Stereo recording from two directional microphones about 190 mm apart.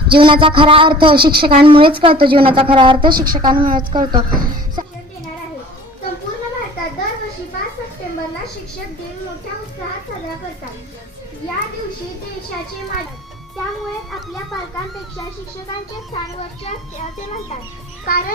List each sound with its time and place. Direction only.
0.1 s a woman's voice: 25° right (ahead or behind)
3.1 s a woman's voice: 50° right (ahead or behind)
3.3 s a woman's voice: 25° right (ahead or behind)
3.6 s a woman's voice: 45° right (ahead or behind)
3.9 s a woman's voice: 25° right (ahead or behind)
18.0 s a child's voice: 45° left (ahead or behind)